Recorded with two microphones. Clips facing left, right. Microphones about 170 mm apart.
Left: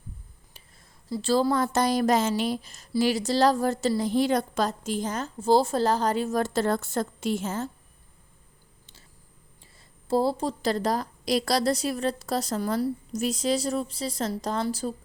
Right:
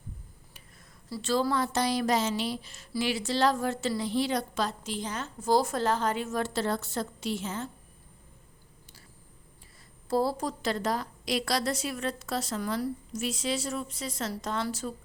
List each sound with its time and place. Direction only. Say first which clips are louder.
1.2 s a woman's voice: left 4 dB; 35° left (ahead or behind)
5.4 s a woman's voice: left 4 dB; 30° left (ahead or behind); by 7.7 s 45° left (ahead or behind)
10.1 s a woman's voice: left 3 dB; 25° left (ahead or behind)